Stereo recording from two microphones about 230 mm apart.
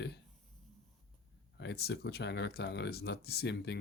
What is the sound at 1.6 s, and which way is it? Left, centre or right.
Speech, left.